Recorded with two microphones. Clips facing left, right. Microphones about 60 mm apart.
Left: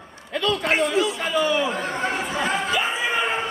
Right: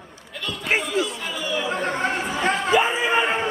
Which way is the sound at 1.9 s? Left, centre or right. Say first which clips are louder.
Right 1 dB; centre.